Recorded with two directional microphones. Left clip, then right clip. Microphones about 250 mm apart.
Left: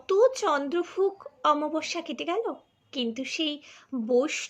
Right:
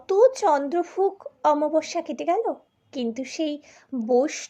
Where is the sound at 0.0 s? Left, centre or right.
Centre.